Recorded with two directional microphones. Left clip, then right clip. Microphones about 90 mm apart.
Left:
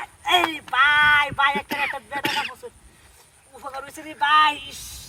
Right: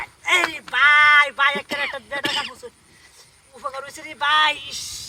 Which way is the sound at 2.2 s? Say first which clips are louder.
Even; 40° left (ahead or behind).